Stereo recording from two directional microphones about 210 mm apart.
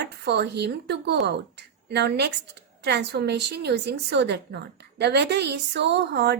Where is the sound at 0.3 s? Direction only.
50° right (ahead or behind).